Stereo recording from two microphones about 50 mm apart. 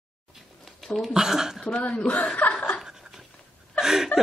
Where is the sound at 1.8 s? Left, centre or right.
Left.